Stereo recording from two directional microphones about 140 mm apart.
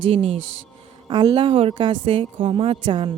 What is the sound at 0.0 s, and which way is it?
Speech, 40° right (ahead or behind).